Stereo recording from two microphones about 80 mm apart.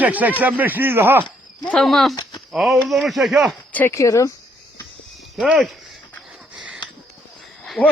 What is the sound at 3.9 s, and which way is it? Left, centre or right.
Speech, left.